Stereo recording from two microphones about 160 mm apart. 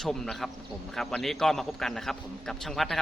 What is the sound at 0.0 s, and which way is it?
Speech, centre (ahead or behind).